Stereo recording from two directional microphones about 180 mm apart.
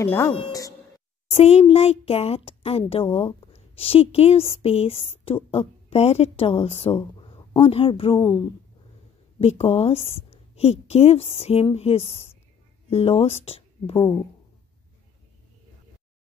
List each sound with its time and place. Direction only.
0.0 s speech: 15° left (ahead or behind)
1.3 s a woman's voice: 35° left (ahead or behind)
9.4 s a woman's voice: 35° left (ahead or behind)
13.9 s speech: 20° left (ahead or behind)